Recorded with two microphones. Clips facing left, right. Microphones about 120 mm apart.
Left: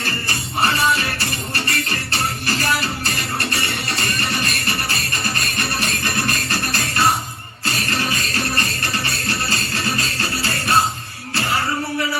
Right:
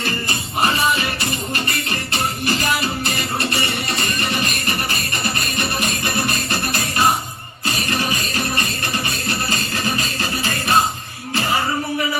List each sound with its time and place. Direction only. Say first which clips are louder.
0.0 s music: right 2 dB; 20° right (ahead or behind)